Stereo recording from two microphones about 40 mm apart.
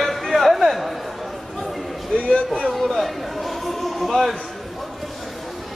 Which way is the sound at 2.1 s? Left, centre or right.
Left.